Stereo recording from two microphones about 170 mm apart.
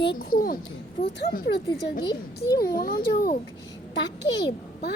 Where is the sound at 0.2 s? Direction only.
55° left (ahead or behind).